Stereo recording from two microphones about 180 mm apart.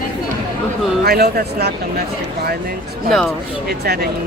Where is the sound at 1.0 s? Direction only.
60° right (ahead or behind).